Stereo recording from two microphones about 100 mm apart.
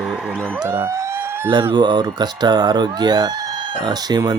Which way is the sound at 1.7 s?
45° right (ahead or behind).